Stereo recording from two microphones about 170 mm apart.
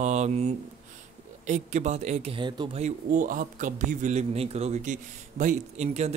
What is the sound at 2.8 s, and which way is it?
A man's voice, 50° right (ahead or behind).